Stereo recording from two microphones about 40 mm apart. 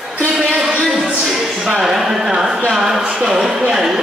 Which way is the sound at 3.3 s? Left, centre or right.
Centre.